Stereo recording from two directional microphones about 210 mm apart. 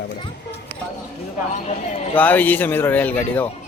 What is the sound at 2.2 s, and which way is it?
Speech, 10° left (ahead or behind).